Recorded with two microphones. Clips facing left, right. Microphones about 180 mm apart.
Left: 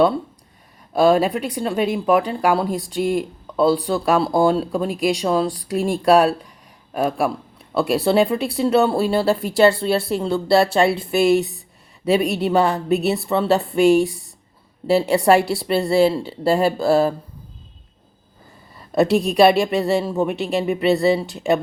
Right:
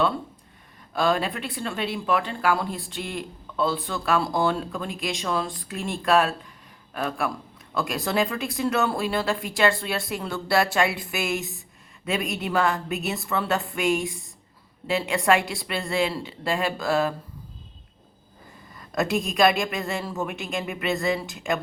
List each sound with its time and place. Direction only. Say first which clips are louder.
0.9 s speech: left 8 dB; 40° left (ahead or behind)
2.0 s speech: left 5 dB; 10° left (ahead or behind)
2.7 s speech: left 12 dB; 40° left (ahead or behind)
18.9 s speech: left 8 dB; 35° left (ahead or behind)